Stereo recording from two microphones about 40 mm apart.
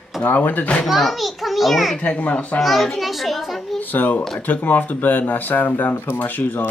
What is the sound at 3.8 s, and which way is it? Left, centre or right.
Speech, left.